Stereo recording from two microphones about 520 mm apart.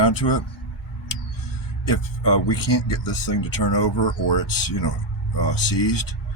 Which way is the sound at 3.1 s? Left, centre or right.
Left.